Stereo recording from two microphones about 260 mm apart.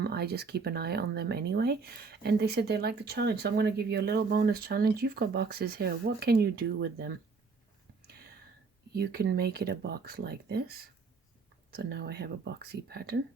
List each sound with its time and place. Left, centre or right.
0.0 s speech: right
8.9 s speech: right